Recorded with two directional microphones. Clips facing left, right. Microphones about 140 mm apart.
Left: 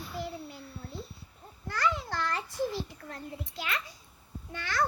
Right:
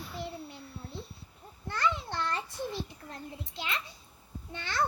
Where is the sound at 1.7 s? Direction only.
25° right (ahead or behind).